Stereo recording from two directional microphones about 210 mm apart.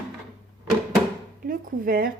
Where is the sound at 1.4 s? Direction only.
45° right (ahead or behind).